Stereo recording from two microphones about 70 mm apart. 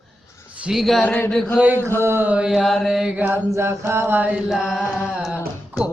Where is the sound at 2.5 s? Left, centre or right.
Centre.